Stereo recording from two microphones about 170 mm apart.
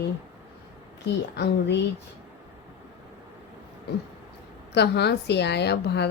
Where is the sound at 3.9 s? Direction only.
70° left (ahead or behind).